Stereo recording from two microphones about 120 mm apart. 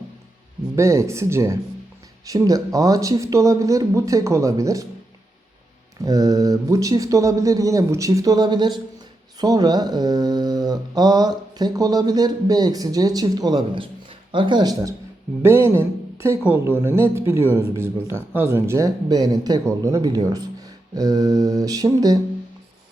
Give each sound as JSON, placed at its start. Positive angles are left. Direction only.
{"t": 0.8, "sound": "speech", "side_deg": -25}
{"t": 6.0, "sound": "speech", "side_deg": -30}